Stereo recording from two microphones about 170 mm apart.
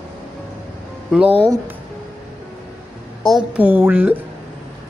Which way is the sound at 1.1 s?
5° right (ahead or behind).